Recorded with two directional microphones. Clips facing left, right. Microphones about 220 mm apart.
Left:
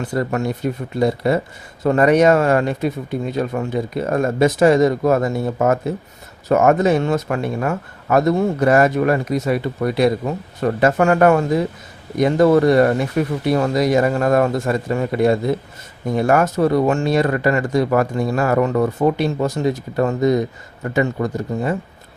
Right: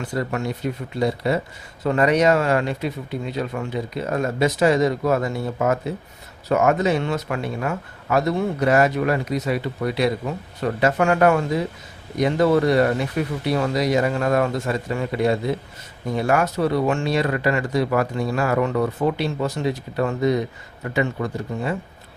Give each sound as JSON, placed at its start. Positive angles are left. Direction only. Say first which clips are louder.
{"t": 0.0, "sound": "speech", "louder": "left 4 dB", "side_deg": 45}